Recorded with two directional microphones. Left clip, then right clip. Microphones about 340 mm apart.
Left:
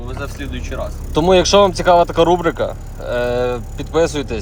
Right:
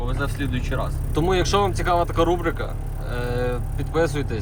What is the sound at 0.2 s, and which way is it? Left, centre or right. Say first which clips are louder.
Speech: left 2 dB; centre.